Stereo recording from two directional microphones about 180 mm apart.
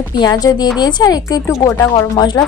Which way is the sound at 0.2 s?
20° left (ahead or behind).